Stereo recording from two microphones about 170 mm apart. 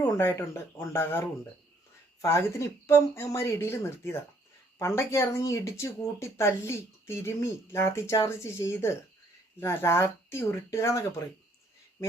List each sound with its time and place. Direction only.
0.0 s speech: 15° left (ahead or behind)
2.2 s speech: 15° left (ahead or behind)